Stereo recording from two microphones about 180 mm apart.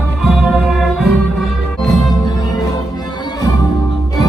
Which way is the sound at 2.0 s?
20° left (ahead or behind).